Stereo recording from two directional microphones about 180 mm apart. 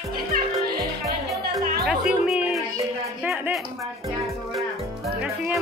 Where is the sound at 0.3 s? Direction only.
60° right (ahead or behind).